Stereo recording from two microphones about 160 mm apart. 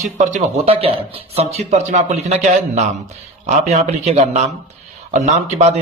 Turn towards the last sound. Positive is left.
turn(degrees=-45)  # may be behind; listen again after turning